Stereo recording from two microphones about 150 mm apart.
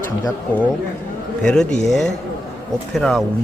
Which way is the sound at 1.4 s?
5° left (ahead or behind).